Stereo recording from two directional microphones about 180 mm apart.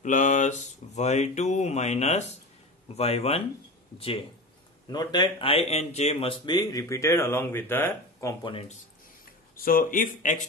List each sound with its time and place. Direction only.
0.0 s speech: 45° left (ahead or behind)
4.8 s speech: 25° left (ahead or behind)
8.5 s speech: 30° left (ahead or behind)
9.2 s speech: 55° left (ahead or behind)